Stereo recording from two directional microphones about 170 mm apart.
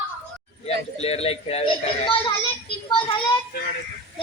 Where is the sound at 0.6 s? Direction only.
40° left (ahead or behind).